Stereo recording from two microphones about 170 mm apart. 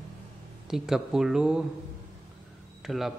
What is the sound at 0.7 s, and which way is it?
Speech, 5° right (ahead or behind).